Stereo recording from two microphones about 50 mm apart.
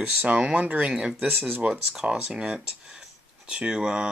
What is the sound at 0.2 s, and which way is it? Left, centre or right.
Speech, right.